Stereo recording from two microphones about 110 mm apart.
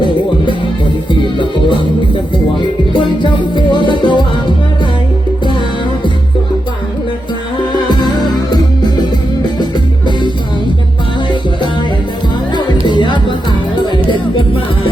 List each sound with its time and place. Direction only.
1.1 s music: 45° left (ahead or behind)
7.9 s music: 40° left (ahead or behind)
12.9 s music: 45° left (ahead or behind)